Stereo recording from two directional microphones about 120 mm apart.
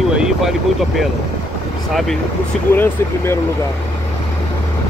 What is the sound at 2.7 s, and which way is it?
Speech, 20° left (ahead or behind).